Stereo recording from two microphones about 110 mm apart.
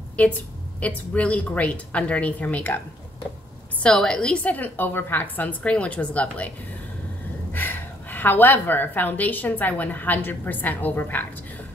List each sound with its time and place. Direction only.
0.2 s a woman's voice: 10° left (ahead or behind)
3.8 s a woman's voice: 5° left (ahead or behind)
7.5 s a woman's voice: 15° left (ahead or behind)